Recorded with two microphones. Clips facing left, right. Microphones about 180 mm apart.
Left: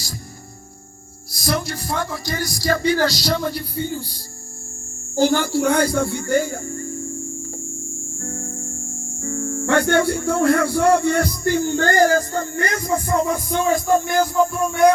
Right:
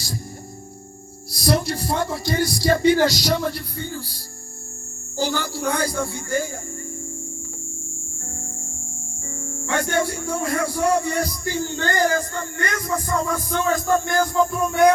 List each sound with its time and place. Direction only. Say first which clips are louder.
1.3 s speech: right 2 dB; 35° right (ahead or behind); by 3.4 s 15° right (ahead or behind)
3.8 s speech: left 5 dB; 20° left (ahead or behind)
5.1 s speech: left 7 dB; 55° left (ahead or behind)
8.2 s music: left 9 dB; 75° left (ahead or behind)
9.4 s music: left 8 dB; 45° left (ahead or behind)
9.6 s music: left 5 dB; 70° left (ahead or behind); by 11.9 s 55° left (ahead or behind)
11.9 s speech: left 3 dB; 40° left (ahead or behind); by 14.2 s 15° left (ahead or behind)
14.2 s music: left 2 dB; 5° left (ahead or behind)